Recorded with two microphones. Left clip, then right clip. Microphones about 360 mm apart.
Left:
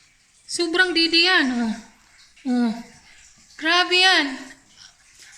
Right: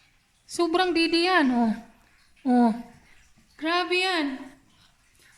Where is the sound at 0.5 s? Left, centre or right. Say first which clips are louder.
Left 4 dB; centre.